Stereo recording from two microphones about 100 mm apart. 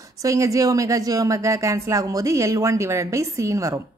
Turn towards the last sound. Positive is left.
turn(degrees=-30)  # may be behind; listen again after turning